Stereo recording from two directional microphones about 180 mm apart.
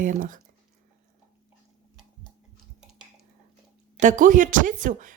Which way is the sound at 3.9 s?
45° right (ahead or behind).